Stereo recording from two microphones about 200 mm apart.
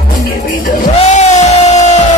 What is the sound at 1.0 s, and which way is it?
Music, 35° left (ahead or behind).